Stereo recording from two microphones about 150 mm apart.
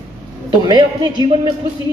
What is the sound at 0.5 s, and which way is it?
Speech, 30° right (ahead or behind).